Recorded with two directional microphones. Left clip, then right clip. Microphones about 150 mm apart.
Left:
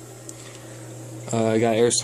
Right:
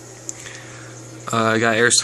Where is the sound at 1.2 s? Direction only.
Centre (ahead or behind).